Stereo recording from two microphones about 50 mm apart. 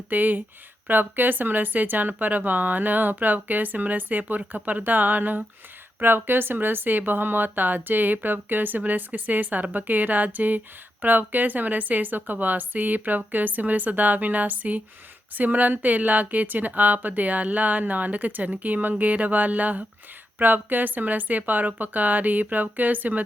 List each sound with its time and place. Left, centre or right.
0.1 s speech: right
6.0 s speech: right